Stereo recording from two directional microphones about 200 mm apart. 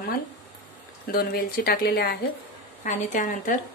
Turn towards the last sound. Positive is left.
turn(degrees=40)  # may be behind; listen again after turning